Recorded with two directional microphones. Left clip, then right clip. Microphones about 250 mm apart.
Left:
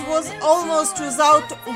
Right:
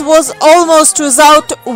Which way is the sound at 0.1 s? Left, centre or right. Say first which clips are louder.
Right 12 dB; right.